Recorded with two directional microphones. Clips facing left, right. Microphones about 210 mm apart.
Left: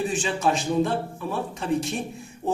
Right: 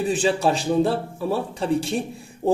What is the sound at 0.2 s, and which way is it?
A man's voice, 35° right (ahead or behind).